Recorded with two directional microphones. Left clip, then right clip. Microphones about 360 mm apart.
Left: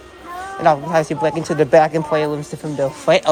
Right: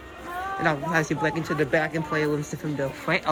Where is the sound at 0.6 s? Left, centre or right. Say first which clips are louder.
Left 10 dB; centre.